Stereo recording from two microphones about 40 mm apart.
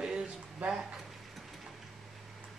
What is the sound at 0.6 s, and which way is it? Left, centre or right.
Speech, right.